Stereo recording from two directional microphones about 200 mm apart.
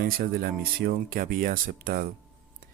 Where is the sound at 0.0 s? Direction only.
50° right (ahead or behind).